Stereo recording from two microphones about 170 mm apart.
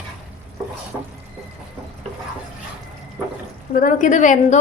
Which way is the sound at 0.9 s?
15° right (ahead or behind).